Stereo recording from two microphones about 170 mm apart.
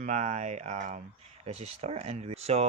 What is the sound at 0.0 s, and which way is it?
Speech, 45° right (ahead or behind).